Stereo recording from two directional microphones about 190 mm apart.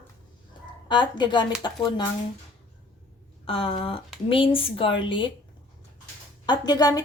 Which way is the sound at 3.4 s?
30° left (ahead or behind).